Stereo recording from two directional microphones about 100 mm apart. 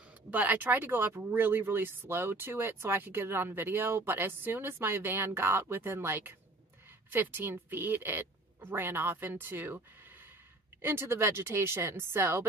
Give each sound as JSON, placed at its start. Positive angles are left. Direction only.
{"t": 0.3, "sound": "speech", "side_deg": -15}
{"t": 10.8, "sound": "speech", "side_deg": -25}